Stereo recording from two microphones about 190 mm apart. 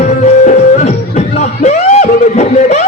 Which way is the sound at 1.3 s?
35° left (ahead or behind).